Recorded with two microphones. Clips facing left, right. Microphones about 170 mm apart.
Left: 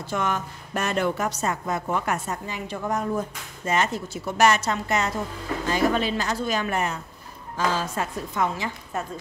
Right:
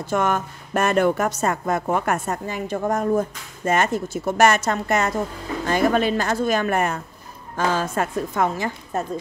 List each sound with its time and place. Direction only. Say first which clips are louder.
0.0 s a woman's voice: right 5 dB; 50° right (ahead or behind)